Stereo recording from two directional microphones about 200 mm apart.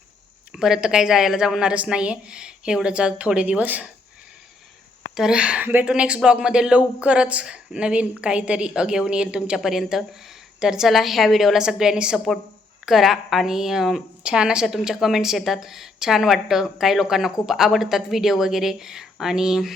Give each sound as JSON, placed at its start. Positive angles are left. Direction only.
{"t": 0.5, "sound": "speech", "side_deg": 0}
{"t": 5.1, "sound": "speech", "side_deg": -5}